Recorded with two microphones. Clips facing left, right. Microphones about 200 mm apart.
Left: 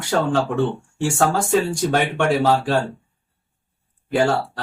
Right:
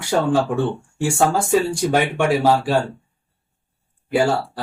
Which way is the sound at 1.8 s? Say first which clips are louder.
Right 1 dB; 10° right (ahead or behind).